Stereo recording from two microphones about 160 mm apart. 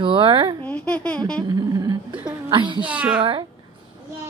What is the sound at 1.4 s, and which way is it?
A woman's voice, 25° right (ahead or behind).